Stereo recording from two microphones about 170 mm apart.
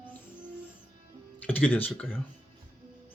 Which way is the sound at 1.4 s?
10° left (ahead or behind).